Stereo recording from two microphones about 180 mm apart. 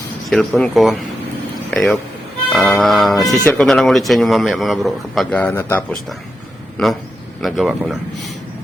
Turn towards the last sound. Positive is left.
turn(degrees=0)  # may be behind; listen again after turning